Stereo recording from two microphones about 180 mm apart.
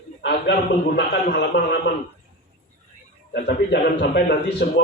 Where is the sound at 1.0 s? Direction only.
65° left (ahead or behind).